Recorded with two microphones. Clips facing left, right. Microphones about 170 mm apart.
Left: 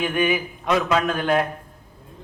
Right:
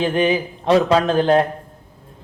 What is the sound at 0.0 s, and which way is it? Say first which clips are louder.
Speech: right 4 dB; 30° right (ahead or behind).